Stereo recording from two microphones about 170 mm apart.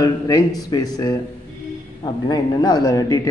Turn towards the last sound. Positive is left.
turn(degrees=20)  # may be behind; listen again after turning